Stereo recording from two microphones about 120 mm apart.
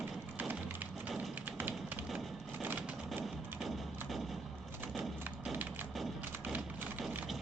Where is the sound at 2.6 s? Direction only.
15° right (ahead or behind).